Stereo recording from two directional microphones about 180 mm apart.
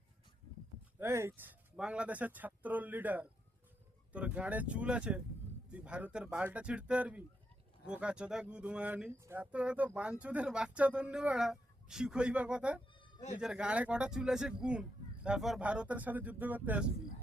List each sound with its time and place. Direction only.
0.9 s speech: 15° right (ahead or behind)